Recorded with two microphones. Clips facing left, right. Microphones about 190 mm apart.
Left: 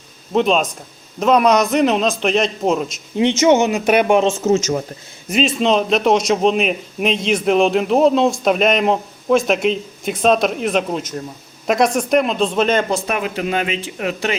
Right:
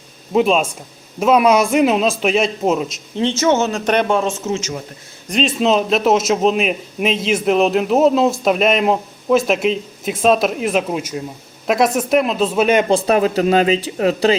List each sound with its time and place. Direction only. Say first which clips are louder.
0.3 s a man's voice: right 1 dB; 5° right (ahead or behind)
3.2 s speech: left 3 dB; 15° left (ahead or behind)
4.4 s a man's voice: left 6 dB; 40° left (ahead or behind)
5.3 s a man's voice: even; centre (ahead or behind)
12.9 s speech: right 6 dB; 35° right (ahead or behind)